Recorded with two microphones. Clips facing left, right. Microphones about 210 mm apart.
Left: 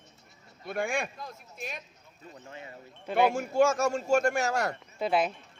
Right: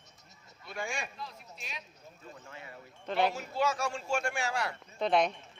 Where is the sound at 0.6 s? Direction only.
55° left (ahead or behind).